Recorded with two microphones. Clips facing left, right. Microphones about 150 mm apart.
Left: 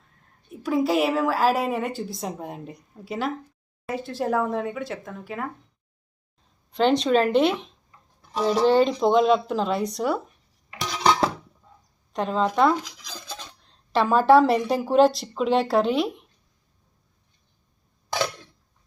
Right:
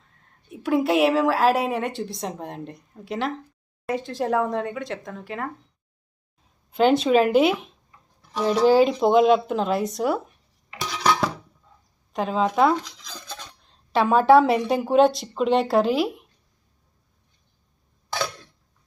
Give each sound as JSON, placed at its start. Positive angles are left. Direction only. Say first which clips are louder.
{"t": 0.5, "sound": "a woman's voice", "louder": "right 1 dB", "side_deg": 0}
{"t": 6.7, "sound": "a woman's voice", "louder": "right 2 dB", "side_deg": -5}
{"t": 11.0, "sound": "dishes", "louder": "left 1 dB", "side_deg": 20}
{"t": 12.1, "sound": "a woman's voice", "louder": "right 1 dB", "side_deg": 0}
{"t": 12.7, "sound": "speech", "louder": "right 2 dB", "side_deg": 10}
{"t": 13.7, "sound": "a woman's voice", "louder": "right 1 dB", "side_deg": 0}